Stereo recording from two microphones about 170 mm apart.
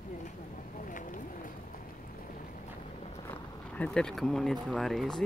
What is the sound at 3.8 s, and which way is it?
Speech, 5° left (ahead or behind).